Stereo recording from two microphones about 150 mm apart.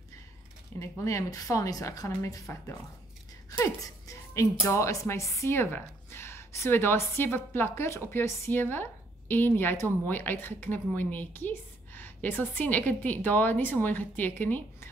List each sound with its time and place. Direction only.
0.7 s a woman's voice: 20° left (ahead or behind)